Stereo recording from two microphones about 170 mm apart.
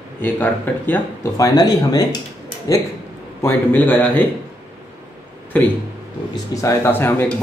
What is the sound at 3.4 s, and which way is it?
Speech, 10° left (ahead or behind).